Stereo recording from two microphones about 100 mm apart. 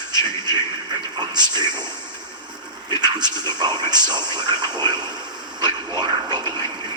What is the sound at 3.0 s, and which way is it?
Speech, 45° right (ahead or behind).